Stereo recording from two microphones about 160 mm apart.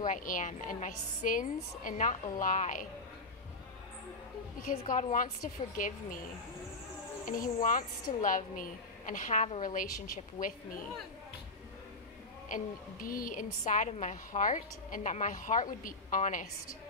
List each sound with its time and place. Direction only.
0.0 s a woman's voice: 55° left (ahead or behind)
4.9 s a woman's voice: 55° left (ahead or behind)
7.2 s a woman's voice: 55° left (ahead or behind)
12.4 s a woman's voice: 60° left (ahead or behind)